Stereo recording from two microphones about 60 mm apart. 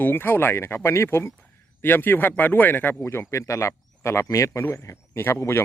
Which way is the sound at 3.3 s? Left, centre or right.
Left.